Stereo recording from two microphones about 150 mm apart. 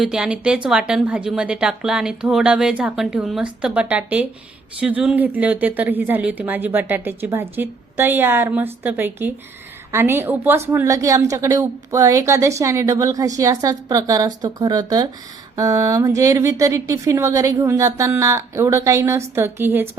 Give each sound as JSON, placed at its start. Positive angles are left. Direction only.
{"t": 0.0, "sound": "a woman's voice", "side_deg": -5}